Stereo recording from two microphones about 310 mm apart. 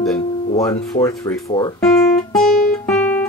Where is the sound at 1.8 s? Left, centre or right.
Centre.